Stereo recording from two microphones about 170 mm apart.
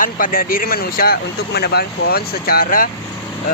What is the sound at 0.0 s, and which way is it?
Speech, 55° left (ahead or behind).